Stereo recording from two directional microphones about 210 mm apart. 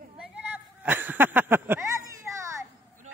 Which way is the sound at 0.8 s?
10° right (ahead or behind).